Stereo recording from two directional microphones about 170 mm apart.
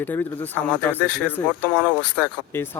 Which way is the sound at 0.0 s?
10° left (ahead or behind).